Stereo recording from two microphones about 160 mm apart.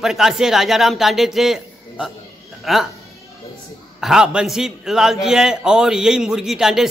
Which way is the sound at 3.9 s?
5° right (ahead or behind).